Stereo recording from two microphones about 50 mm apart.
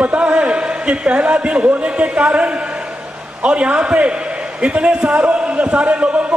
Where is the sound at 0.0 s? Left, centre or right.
Right.